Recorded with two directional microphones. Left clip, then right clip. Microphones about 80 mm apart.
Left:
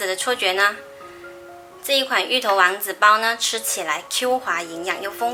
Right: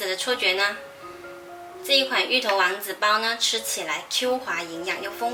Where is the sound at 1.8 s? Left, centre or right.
Left.